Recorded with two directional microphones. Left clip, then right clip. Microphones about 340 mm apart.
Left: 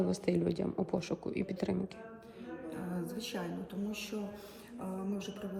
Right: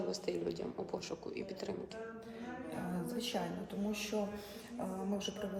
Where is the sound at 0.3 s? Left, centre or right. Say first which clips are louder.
Left 5 dB; centre.